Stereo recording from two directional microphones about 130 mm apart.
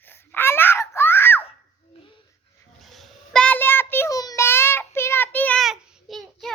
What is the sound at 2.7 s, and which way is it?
Child singing, centre (ahead or behind).